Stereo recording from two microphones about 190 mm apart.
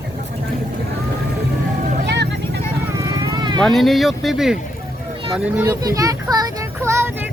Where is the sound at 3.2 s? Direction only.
20° right (ahead or behind).